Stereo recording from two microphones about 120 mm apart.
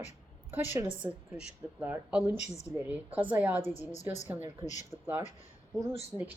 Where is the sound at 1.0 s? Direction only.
15° right (ahead or behind).